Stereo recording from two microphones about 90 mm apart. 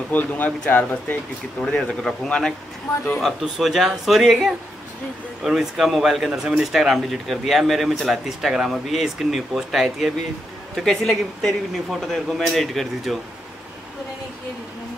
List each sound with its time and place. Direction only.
0.1 s speech: 20° left (ahead or behind)
1.6 s speech: 10° left (ahead or behind)